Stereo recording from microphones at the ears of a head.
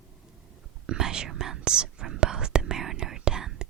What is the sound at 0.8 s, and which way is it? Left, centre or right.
Whispering, right.